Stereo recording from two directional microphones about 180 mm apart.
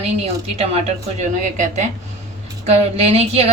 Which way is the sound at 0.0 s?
35° right (ahead or behind).